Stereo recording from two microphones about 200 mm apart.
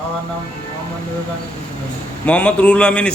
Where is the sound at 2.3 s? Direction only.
5° left (ahead or behind).